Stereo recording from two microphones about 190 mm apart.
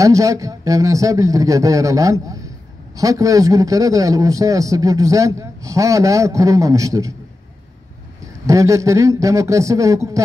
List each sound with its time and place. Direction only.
0.0 s a man's voice: 15° right (ahead or behind)
8.2 s a man's voice: 15° right (ahead or behind)